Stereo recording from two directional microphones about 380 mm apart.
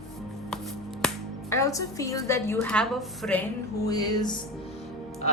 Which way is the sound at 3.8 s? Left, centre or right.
Centre.